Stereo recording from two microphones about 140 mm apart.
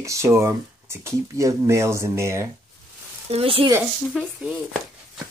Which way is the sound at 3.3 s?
45° right (ahead or behind).